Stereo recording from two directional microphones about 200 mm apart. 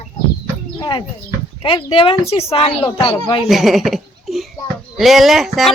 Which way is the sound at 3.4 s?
Centre (ahead or behind).